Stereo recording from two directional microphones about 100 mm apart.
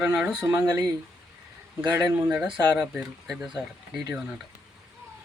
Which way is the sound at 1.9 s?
15° right (ahead or behind).